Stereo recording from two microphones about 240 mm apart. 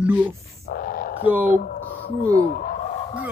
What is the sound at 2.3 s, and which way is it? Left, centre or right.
Fowl, left.